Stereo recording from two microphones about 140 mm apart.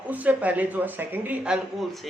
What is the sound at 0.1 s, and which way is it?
Speech, 10° right (ahead or behind).